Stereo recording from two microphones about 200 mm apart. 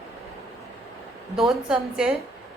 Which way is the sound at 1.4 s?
Centre (ahead or behind).